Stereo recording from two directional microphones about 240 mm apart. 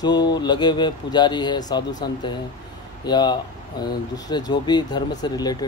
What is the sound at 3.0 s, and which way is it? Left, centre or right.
Speech, centre.